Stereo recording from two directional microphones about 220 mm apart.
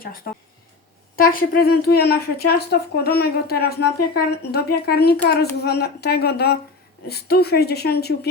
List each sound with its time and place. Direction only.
1.1 s speech: 40° left (ahead or behind)